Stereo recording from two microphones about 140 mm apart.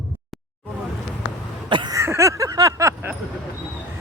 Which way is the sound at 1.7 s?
35° right (ahead or behind).